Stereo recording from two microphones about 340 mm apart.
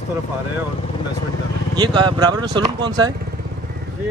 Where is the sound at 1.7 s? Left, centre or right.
Centre.